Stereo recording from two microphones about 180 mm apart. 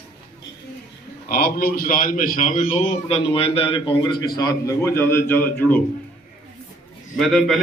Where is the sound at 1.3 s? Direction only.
55° left (ahead or behind); by 5.8 s 10° left (ahead or behind).